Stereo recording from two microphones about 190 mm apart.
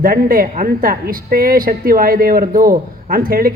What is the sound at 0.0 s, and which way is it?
Speech, 50° right (ahead or behind).